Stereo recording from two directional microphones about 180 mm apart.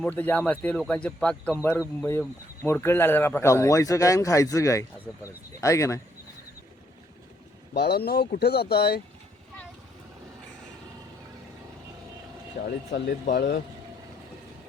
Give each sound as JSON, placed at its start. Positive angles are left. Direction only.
{"t": 0.0, "sound": "speech", "side_deg": 10}
{"t": 7.7, "sound": "speech", "side_deg": 60}
{"t": 12.6, "sound": "speech", "side_deg": 50}
{"t": 13.3, "sound": "speech", "side_deg": 70}